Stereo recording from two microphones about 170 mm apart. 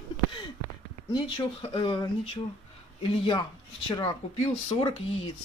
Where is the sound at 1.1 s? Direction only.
25° left (ahead or behind).